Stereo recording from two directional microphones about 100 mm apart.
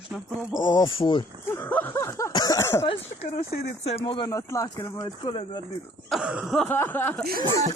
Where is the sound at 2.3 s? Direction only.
40° left (ahead or behind).